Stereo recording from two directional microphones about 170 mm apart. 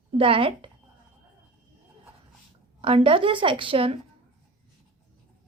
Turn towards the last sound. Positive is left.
turn(degrees=-35)  # may be behind; listen again after turning